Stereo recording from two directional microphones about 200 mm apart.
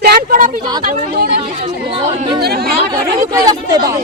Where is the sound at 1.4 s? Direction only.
35° right (ahead or behind).